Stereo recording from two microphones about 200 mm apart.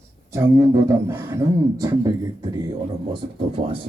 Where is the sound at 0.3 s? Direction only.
15° right (ahead or behind).